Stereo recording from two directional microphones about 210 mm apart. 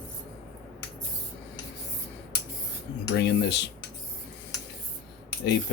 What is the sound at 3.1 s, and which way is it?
Speech, 55° left (ahead or behind).